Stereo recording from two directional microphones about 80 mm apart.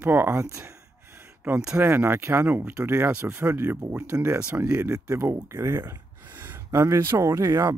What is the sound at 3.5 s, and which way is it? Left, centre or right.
Speech, right.